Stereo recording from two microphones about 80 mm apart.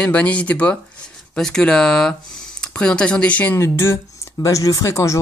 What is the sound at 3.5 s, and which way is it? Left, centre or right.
Speech, left.